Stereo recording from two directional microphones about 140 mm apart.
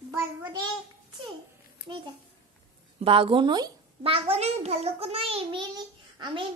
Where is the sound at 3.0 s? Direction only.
40° right (ahead or behind).